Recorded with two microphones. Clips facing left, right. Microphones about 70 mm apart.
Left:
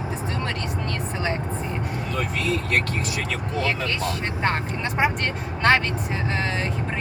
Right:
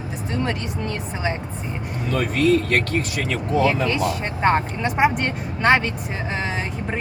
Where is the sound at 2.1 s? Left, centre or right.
Right.